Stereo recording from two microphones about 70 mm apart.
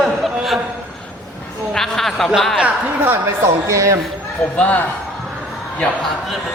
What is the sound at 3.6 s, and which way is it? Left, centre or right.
Speech, right.